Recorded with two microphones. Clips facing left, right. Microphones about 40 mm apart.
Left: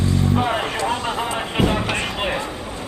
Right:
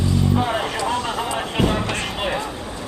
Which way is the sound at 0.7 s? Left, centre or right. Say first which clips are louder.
Even; centre.